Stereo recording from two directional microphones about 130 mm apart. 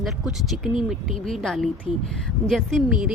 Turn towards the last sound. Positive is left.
turn(degrees=0)  # may be behind; listen again after turning